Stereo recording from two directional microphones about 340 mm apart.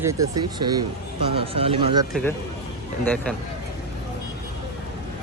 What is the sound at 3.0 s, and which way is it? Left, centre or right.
Speech, centre.